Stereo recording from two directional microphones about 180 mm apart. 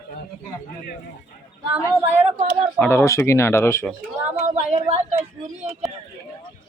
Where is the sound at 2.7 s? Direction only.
10° left (ahead or behind).